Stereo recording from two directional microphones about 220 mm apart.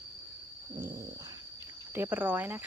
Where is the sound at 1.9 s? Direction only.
10° right (ahead or behind).